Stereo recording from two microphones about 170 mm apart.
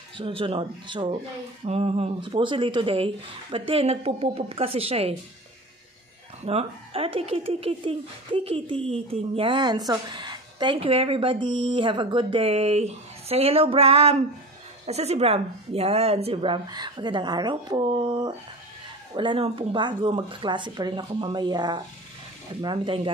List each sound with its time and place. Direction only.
0.2 s speech: 30° right (ahead or behind)
6.4 s speech: 35° right (ahead or behind)